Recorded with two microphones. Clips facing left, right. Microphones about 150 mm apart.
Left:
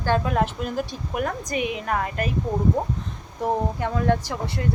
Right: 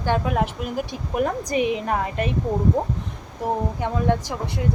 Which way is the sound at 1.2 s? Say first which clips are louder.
Right 4 dB; 30° right (ahead or behind).